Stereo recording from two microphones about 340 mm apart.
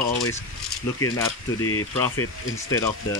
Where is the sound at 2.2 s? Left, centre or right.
Left.